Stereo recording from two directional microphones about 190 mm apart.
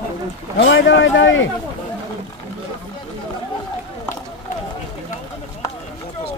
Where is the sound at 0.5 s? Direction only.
75° left (ahead or behind).